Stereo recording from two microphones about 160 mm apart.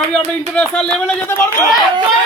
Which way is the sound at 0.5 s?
5° left (ahead or behind).